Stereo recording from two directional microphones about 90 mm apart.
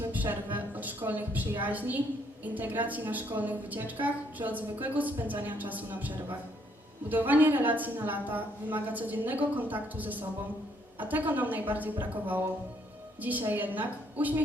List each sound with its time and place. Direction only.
0.0 s a woman's voice: 20° right (ahead or behind)